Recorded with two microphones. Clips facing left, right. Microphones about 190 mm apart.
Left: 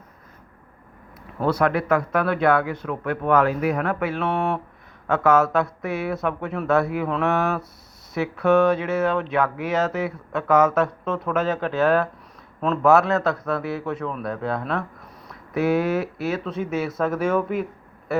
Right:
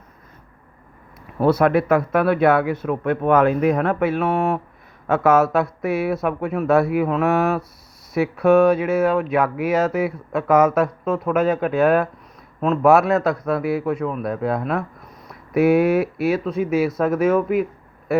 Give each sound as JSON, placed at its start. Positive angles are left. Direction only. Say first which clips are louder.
{"t": 1.5, "sound": "speech", "louder": "right 4 dB", "side_deg": -20}
{"t": 4.2, "sound": "speech", "louder": "right 3 dB", "side_deg": -5}
{"t": 5.0, "sound": "speech", "louder": "right 2 dB", "side_deg": -15}